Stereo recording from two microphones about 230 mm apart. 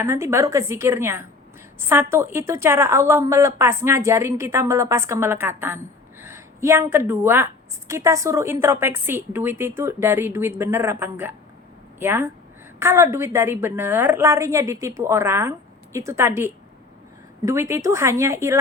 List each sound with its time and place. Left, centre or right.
0.0 s a woman's voice: centre